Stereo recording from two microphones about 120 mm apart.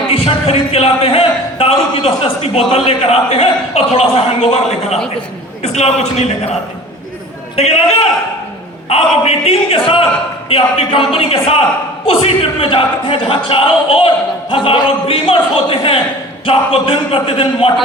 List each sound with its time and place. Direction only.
0.1 s a man's voice: 55° left (ahead or behind)
7.5 s a man's voice: 60° left (ahead or behind)